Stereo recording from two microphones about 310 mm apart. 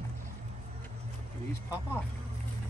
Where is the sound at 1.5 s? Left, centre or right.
Centre.